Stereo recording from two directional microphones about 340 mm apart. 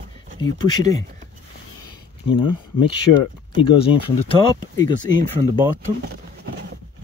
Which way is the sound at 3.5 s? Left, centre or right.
Centre.